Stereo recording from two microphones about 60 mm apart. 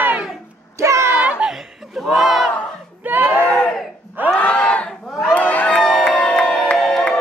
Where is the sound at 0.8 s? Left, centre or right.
Right.